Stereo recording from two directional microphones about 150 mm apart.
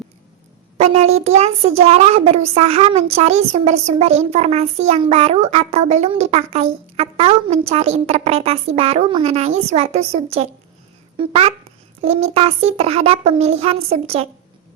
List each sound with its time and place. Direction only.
0.8 s speech: 45° right (ahead or behind)